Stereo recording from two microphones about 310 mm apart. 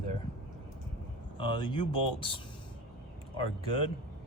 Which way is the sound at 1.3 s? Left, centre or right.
Centre.